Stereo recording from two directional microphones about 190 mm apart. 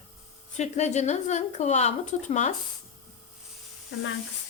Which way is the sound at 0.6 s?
35° left (ahead or behind).